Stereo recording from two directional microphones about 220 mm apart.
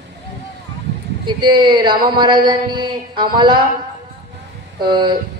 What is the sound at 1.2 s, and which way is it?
A man's voice, 20° right (ahead or behind).